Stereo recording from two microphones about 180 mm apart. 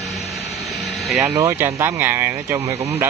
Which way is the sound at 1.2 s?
15° right (ahead or behind).